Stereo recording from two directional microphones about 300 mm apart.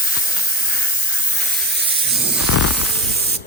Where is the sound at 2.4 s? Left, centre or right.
Left.